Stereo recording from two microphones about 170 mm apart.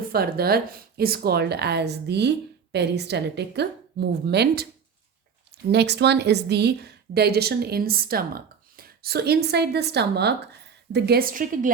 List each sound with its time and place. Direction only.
0.1 s a woman's voice: 65° right (ahead or behind)
5.7 s a woman's voice: 80° right; by 11.7 s 50° right (ahead or behind)